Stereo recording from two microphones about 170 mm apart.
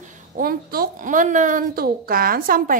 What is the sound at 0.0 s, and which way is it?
A woman's voice, 50° right (ahead or behind).